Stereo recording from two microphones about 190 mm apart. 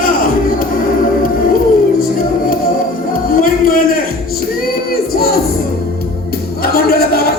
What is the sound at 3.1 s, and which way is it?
Music, 45° left (ahead or behind).